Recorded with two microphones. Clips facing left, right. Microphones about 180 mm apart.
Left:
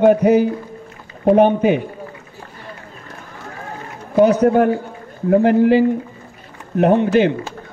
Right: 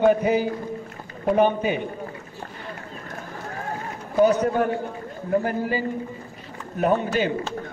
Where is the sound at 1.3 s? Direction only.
65° left (ahead or behind).